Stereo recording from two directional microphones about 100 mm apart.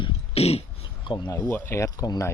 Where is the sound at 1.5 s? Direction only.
25° left (ahead or behind).